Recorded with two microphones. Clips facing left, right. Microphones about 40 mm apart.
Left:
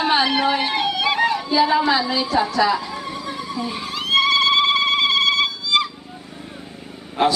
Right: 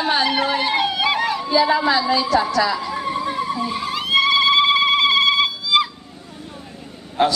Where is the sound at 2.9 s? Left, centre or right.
Right.